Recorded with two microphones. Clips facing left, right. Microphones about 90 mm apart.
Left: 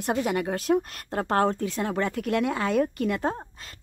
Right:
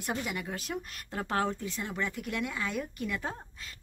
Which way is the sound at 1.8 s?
65° left (ahead or behind).